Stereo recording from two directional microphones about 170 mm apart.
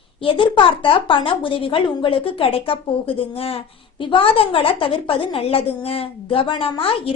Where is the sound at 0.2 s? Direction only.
30° left (ahead or behind).